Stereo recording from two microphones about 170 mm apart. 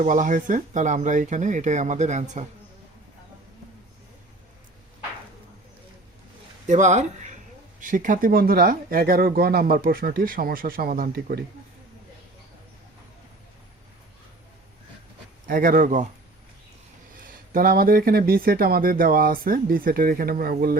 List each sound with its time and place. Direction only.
0.0 s speech: 50° right (ahead or behind)
6.7 s speech: 45° right (ahead or behind); by 11.4 s 65° right (ahead or behind)
15.4 s speech: 60° right (ahead or behind)
17.2 s speech: 55° right (ahead or behind)